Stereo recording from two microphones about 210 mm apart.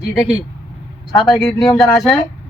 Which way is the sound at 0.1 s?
5° right (ahead or behind).